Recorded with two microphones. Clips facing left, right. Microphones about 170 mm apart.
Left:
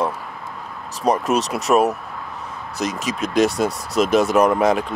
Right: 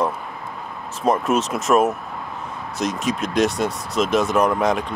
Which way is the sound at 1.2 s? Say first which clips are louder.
Even; 40° left (ahead or behind).